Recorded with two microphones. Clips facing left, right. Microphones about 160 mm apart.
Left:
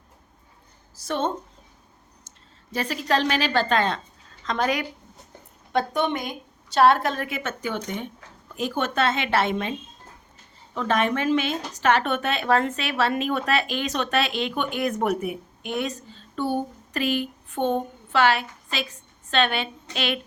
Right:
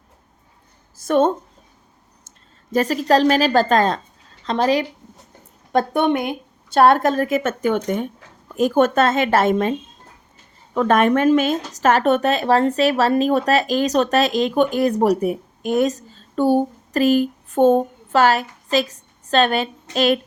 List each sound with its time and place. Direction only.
0.9 s a woman's voice: 50° right (ahead or behind)
2.7 s speech: 40° right (ahead or behind)
5.7 s a woman's voice: 55° right (ahead or behind)
10.8 s speech: 50° right (ahead or behind)